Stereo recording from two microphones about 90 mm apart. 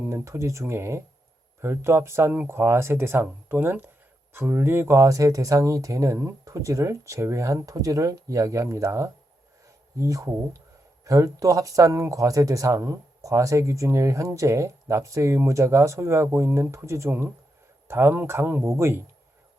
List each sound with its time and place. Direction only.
0.1 s speech: 30° right (ahead or behind)